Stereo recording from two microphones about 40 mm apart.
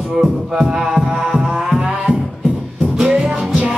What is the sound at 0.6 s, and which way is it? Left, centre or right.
Music, centre.